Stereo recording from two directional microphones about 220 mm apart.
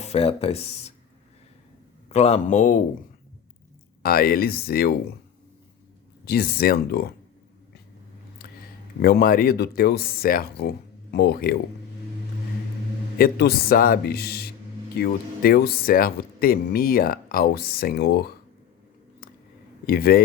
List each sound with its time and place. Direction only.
0.0 s speech: 25° left (ahead or behind)
2.0 s a man's voice: 30° left (ahead or behind)
4.0 s speech: 45° left (ahead or behind)
6.2 s speech: 45° left (ahead or behind)
9.0 s speech: 45° left (ahead or behind)
13.1 s speech: 45° left (ahead or behind)
19.8 s a man's voice: 45° left (ahead or behind)